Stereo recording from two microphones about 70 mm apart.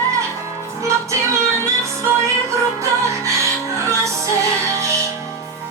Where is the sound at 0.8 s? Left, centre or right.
Right.